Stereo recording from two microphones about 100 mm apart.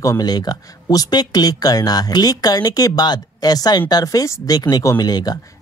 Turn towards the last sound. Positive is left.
turn(degrees=40)  # may be behind; listen again after turning